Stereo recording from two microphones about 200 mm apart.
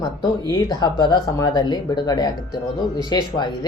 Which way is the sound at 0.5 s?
20° left (ahead or behind).